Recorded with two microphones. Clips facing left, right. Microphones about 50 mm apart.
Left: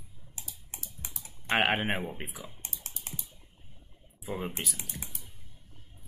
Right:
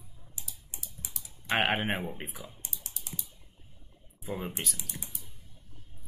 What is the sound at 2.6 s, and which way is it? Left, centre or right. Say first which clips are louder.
Typing: left 2 dB; left.